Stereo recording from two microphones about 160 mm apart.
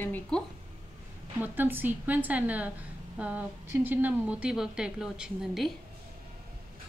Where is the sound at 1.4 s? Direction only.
10° right (ahead or behind).